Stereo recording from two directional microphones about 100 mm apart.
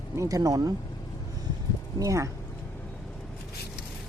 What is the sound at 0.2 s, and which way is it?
Speech, 35° right (ahead or behind).